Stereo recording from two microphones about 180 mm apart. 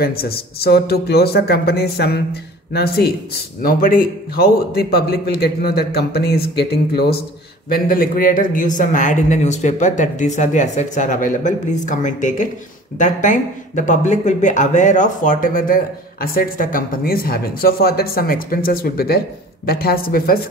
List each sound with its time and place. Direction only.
0.0 s a man's voice: 60° left (ahead or behind)